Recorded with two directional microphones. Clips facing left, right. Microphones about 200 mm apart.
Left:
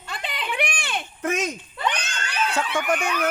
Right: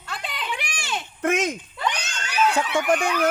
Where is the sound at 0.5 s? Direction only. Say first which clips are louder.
Left 6 dB; 55° left (ahead or behind).